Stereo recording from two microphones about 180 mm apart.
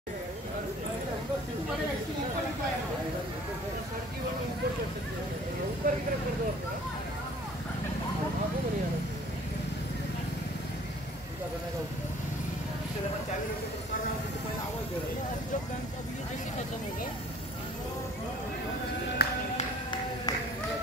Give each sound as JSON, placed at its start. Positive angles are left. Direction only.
{"t": 5.8, "sound": "speech", "side_deg": -45}
{"t": 19.2, "sound": "music", "side_deg": 65}